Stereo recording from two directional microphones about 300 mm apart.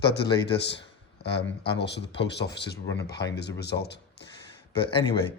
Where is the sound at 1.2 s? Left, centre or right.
Left.